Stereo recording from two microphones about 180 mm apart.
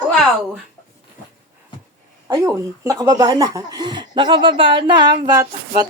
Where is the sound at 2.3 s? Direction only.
20° right (ahead or behind).